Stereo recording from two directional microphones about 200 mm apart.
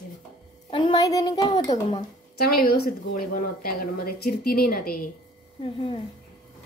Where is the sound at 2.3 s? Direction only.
50° left (ahead or behind).